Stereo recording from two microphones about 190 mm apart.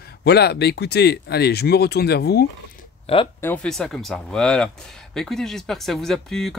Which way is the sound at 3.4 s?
10° left (ahead or behind).